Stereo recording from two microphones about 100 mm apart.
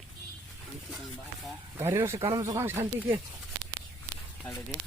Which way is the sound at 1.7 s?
30° right (ahead or behind).